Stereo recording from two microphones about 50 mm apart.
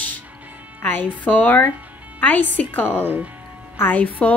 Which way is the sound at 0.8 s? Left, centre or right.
Left.